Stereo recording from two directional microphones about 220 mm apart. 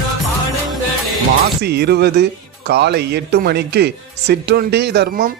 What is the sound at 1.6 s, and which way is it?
Speech, 45° right (ahead or behind).